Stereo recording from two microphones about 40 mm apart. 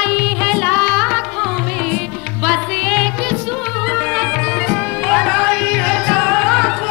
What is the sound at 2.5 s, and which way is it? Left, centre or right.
Music, centre.